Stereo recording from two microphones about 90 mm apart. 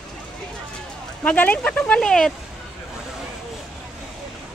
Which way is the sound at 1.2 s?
15° left (ahead or behind).